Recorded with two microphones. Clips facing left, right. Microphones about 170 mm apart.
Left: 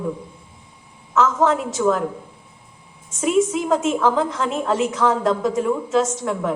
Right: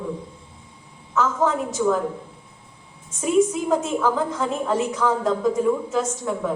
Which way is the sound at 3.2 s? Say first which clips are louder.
Left 1 dB; 90° left.